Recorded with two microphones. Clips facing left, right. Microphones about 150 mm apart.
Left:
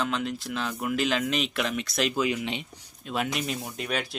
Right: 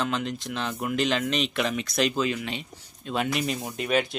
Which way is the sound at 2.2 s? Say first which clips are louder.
Even; 15° left (ahead or behind).